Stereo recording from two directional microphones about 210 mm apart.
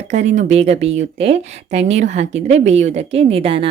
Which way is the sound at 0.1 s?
35° right (ahead or behind).